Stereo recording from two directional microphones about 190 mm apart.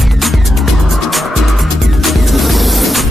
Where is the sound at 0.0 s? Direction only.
Centre (ahead or behind).